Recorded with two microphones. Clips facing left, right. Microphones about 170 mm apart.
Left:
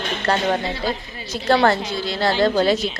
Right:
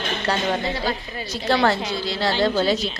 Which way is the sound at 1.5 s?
50° left (ahead or behind).